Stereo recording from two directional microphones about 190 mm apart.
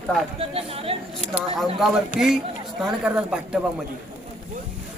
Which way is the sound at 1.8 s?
Centre (ahead or behind).